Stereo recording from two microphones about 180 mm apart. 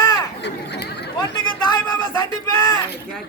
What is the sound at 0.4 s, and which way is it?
Chatter, 70° left (ahead or behind).